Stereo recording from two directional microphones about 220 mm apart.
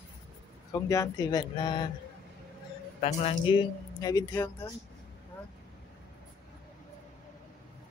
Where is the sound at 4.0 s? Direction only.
15° left (ahead or behind).